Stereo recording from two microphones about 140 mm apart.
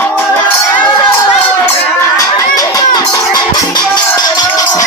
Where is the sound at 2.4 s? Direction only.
25° left (ahead or behind).